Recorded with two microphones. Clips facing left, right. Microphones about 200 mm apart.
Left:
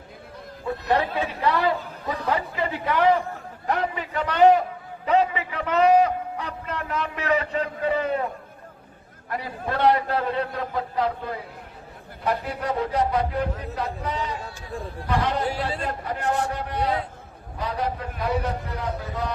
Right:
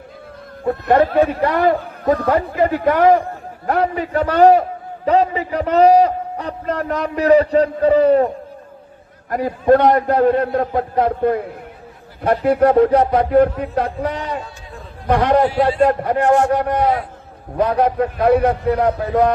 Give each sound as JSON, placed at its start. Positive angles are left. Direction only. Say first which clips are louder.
{"t": 0.6, "sound": "a man's voice", "louder": "right 9 dB", "side_deg": -50}
{"t": 9.3, "sound": "a man's voice", "louder": "right 15 dB", "side_deg": -50}